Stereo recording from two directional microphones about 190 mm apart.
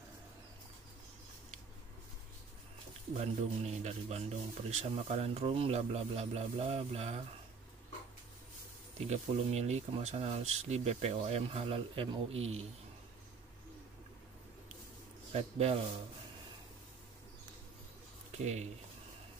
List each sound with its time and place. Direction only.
3.2 s speech: 35° right (ahead or behind)
9.0 s speech: 35° right (ahead or behind)
15.3 s speech: 30° right (ahead or behind)
18.3 s speech: 35° right (ahead or behind)